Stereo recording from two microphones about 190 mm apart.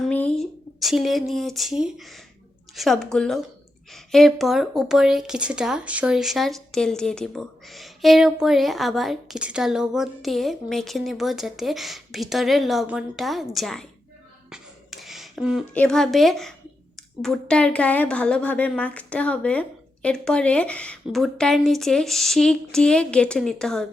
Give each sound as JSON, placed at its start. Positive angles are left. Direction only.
{"t": 0.0, "sound": "speech", "side_deg": 5}
{"t": 14.5, "sound": "beatboxing", "side_deg": 0}
{"t": 15.7, "sound": "speech", "side_deg": 5}